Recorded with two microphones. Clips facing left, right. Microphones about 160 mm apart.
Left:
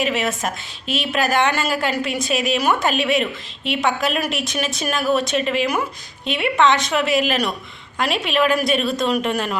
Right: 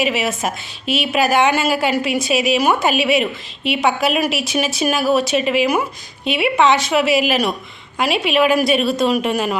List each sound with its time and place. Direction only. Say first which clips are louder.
0.0 s a woman's voice: right 2 dB; 5° right (ahead or behind)